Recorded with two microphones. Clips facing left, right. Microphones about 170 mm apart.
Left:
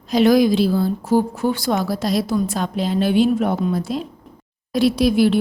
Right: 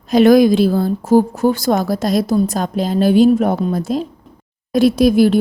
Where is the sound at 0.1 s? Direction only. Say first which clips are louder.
Right 5 dB; 50° right (ahead or behind).